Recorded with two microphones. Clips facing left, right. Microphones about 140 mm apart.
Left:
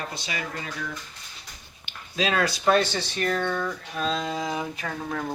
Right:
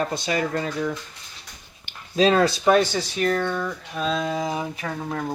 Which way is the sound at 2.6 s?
10° right (ahead or behind).